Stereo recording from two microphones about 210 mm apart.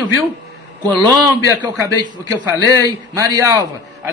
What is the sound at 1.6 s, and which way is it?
A man's voice, 15° right (ahead or behind).